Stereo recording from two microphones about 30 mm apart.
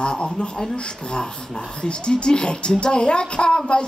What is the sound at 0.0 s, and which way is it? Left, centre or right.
Speech, left.